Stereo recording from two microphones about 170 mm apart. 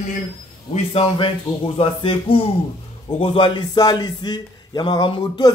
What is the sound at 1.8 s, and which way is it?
Music, 30° left (ahead or behind).